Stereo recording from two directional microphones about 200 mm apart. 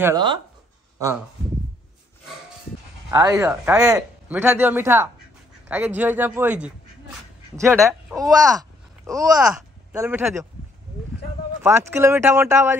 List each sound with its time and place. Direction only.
0.0 s speech: 20° right (ahead or behind)
3.1 s speech: 15° right (ahead or behind)
11.6 s speech: 10° right (ahead or behind)